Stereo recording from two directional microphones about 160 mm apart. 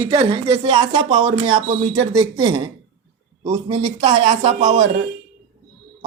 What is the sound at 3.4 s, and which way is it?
A man's voice, 40° right (ahead or behind).